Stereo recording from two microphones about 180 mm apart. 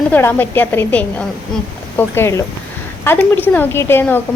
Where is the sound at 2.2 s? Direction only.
15° left (ahead or behind).